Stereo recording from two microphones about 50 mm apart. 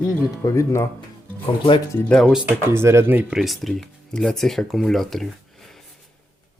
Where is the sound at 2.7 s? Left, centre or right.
Right.